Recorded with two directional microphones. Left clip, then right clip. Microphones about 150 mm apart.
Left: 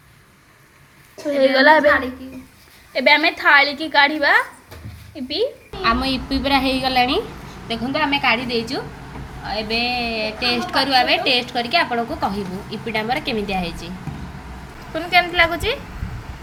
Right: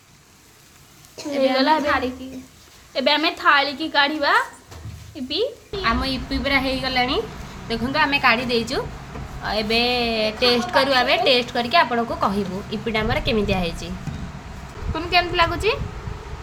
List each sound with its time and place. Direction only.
1.4 s a woman's voice: 15° left (ahead or behind)
2.9 s a woman's voice: 10° left (ahead or behind)
7.9 s a woman's voice: 10° right (ahead or behind); by 13.9 s 25° right (ahead or behind)
14.9 s a woman's voice: 25° right (ahead or behind)